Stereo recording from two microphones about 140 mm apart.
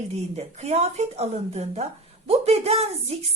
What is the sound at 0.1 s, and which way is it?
A woman's voice, 50° right (ahead or behind).